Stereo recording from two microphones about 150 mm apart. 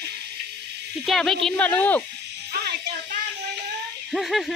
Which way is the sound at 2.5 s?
90° right.